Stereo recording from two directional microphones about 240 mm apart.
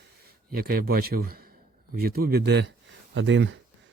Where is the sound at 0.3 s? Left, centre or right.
Right.